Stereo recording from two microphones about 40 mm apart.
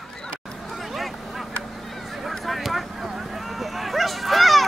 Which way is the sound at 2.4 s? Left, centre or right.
Centre.